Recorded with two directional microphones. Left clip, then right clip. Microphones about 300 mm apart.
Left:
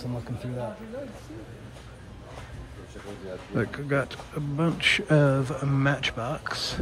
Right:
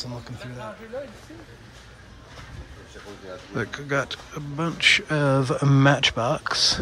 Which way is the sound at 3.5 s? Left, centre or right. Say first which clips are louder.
Right 1 dB; centre.